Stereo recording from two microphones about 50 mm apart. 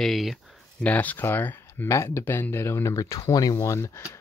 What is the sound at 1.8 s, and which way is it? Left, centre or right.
Speech, left.